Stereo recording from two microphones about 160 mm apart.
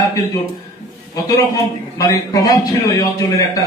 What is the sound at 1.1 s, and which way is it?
A man's voice, 20° left (ahead or behind).